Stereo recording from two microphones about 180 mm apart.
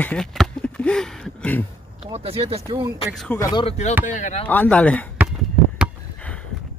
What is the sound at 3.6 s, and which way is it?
Speech, 40° left (ahead or behind).